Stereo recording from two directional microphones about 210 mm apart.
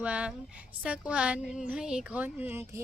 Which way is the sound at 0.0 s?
5° right (ahead or behind).